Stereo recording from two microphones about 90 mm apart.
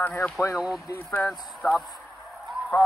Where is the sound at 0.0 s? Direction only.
20° left (ahead or behind).